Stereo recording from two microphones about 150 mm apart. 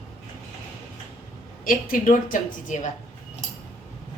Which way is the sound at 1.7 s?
60° left (ahead or behind).